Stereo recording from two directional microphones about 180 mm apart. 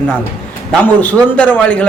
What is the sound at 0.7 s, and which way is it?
Speech, 10° left (ahead or behind).